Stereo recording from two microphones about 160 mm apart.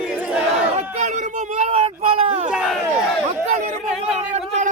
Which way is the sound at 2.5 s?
5° right (ahead or behind).